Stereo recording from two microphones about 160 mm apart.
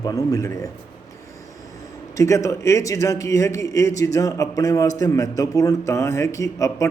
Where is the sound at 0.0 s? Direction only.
25° left (ahead or behind).